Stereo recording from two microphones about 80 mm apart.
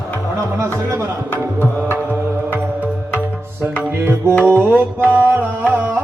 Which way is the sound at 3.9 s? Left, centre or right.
Right.